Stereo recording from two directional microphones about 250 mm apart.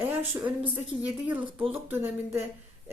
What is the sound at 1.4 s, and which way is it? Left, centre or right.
Speech, right.